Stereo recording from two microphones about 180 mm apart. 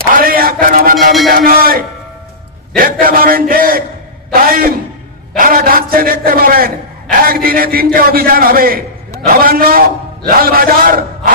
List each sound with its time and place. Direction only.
0.1 s a sound: 55° right (ahead or behind)
0.9 s speech: centre (ahead or behind)
1.3 s a man's voice: 55° right (ahead or behind)